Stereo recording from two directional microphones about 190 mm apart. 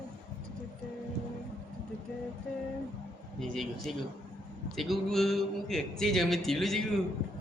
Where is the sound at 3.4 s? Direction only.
Centre (ahead or behind).